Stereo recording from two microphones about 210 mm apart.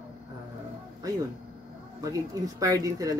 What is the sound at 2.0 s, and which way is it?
Speech, 15° right (ahead or behind).